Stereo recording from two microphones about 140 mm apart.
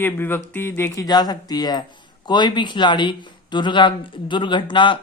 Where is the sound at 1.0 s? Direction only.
30° left (ahead or behind).